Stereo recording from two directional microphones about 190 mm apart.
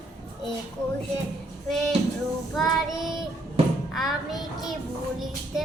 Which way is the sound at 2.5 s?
Centre (ahead or behind).